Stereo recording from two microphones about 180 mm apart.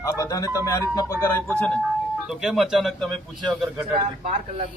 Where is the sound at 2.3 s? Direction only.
Centre (ahead or behind).